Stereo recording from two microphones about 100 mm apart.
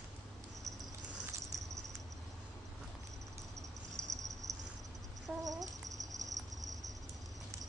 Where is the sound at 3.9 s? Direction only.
35° right (ahead or behind).